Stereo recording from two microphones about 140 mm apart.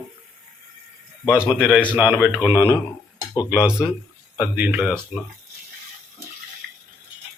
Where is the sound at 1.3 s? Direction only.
5° right (ahead or behind).